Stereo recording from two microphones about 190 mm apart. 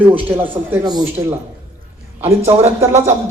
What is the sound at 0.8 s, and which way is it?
Speech, 20° right (ahead or behind).